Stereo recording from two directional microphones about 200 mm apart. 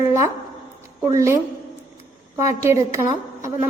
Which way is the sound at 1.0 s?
15° right (ahead or behind).